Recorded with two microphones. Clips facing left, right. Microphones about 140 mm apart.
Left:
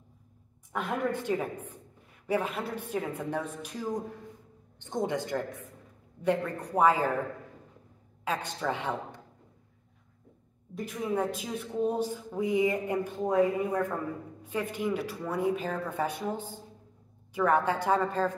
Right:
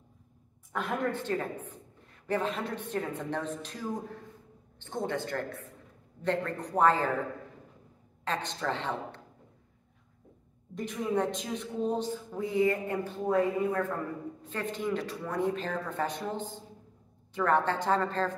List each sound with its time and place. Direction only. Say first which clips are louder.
1.1 s a woman's voice: left 2 dB; 10° left (ahead or behind)
8.3 s a woman's voice: left 1 dB; 10° left (ahead or behind)
10.7 s a woman's voice: right 1 dB; 5° left (ahead or behind)